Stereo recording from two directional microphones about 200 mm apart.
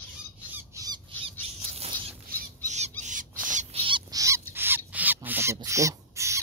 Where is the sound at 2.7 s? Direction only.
35° right (ahead or behind); by 4.4 s 15° right (ahead or behind).